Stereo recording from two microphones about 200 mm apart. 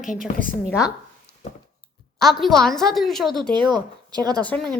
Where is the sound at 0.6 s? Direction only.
15° left (ahead or behind).